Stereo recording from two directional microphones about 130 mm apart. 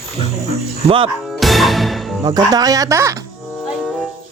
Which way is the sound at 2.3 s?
30° right (ahead or behind).